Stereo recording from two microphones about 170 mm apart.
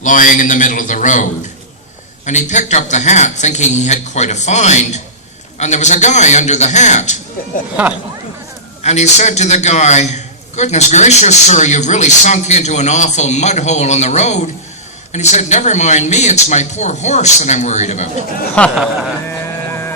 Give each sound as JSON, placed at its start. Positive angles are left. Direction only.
{"t": 0.0, "sound": "a man's voice", "side_deg": 50}
{"t": 8.8, "sound": "a man's voice", "side_deg": 40}